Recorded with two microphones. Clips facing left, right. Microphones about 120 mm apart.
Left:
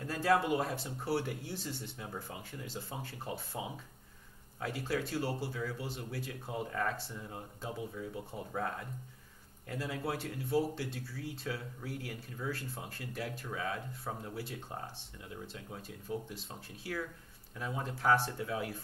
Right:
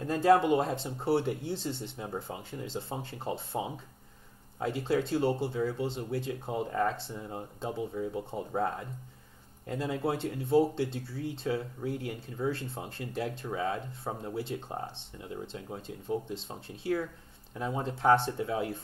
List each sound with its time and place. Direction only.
0.0 s speech: 25° right (ahead or behind)